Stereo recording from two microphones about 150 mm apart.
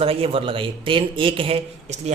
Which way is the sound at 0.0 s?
40° right (ahead or behind).